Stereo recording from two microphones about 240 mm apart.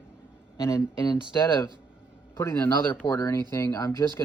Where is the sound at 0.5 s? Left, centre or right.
Centre.